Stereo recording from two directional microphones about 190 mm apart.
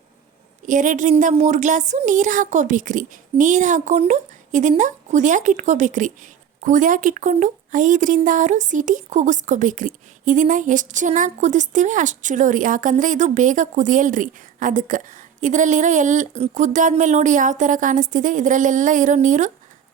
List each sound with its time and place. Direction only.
0.6 s speech: 40° right (ahead or behind)